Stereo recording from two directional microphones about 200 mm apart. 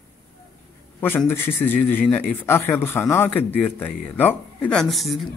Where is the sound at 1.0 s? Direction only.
10° left (ahead or behind).